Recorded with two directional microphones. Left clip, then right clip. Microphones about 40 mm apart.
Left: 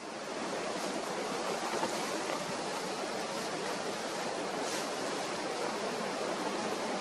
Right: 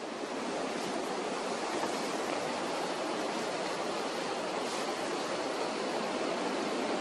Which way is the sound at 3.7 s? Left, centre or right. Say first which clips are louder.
Right 2 dB; centre.